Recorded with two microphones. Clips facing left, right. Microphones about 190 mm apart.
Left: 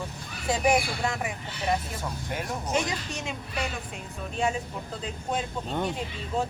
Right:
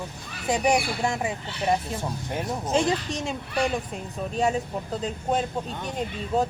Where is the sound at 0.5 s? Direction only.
20° right (ahead or behind).